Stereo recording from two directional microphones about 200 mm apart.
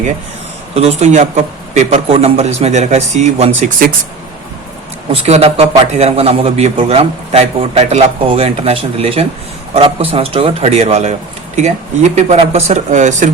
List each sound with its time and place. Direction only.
0.7 s a man's voice: 30° right (ahead or behind)
5.1 s a man's voice: 30° right (ahead or behind)